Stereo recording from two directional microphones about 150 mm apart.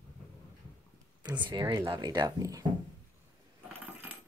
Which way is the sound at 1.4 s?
30° right (ahead or behind).